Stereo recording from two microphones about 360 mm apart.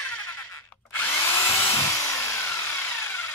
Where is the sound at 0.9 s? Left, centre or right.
Centre.